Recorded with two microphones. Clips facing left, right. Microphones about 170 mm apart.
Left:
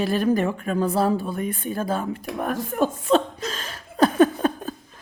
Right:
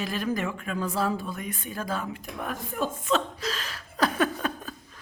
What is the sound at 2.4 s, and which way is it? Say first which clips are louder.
Speech: left 7 dB; 50° left (ahead or behind).